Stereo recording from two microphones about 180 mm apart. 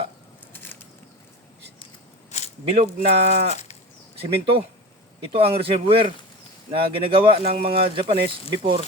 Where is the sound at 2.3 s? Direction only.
40° left (ahead or behind).